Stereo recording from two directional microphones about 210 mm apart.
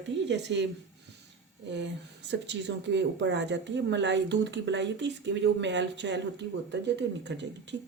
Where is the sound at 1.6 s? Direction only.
55° right (ahead or behind).